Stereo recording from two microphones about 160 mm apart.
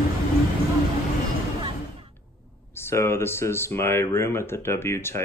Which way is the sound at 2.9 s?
15° left (ahead or behind).